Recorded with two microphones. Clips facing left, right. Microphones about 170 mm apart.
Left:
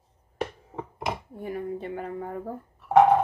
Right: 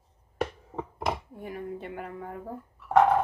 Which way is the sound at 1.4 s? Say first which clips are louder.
Left 5 dB; 30° left (ahead or behind).